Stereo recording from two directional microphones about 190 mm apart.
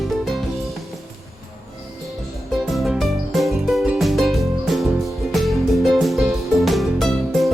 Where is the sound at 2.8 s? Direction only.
Centre (ahead or behind).